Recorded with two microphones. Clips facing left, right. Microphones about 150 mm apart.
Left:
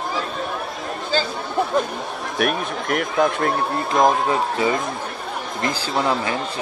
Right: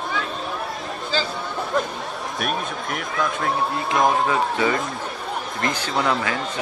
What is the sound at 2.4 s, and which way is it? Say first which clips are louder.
Speech: left 5 dB; 65° left (ahead or behind).